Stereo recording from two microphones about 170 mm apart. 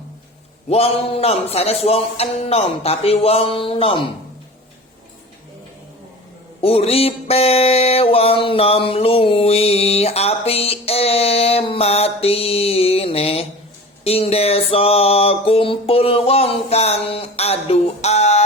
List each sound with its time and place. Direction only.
0.7 s music: 35° left (ahead or behind)
6.6 s music: 35° left (ahead or behind)